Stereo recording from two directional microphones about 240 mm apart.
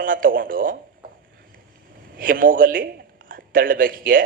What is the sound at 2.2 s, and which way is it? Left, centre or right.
A man's voice, right.